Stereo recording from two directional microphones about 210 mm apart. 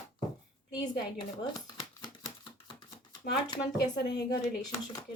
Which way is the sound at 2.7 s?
20° left (ahead or behind).